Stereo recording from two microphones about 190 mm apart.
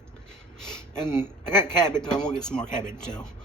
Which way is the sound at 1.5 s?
5° left (ahead or behind).